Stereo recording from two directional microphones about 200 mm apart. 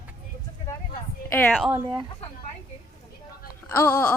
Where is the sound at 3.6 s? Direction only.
15° left (ahead or behind).